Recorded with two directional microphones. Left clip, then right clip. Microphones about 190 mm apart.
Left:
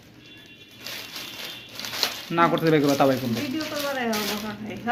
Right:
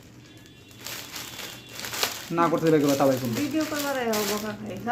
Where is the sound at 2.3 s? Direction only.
5° left (ahead or behind).